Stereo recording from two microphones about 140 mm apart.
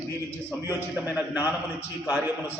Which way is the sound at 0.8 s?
15° right (ahead or behind).